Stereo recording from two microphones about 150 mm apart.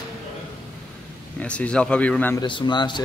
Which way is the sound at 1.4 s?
10° left (ahead or behind).